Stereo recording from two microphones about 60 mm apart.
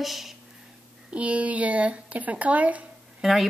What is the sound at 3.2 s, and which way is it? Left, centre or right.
Speech, centre.